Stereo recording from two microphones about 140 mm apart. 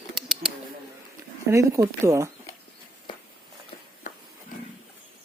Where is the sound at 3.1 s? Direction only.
35° left (ahead or behind).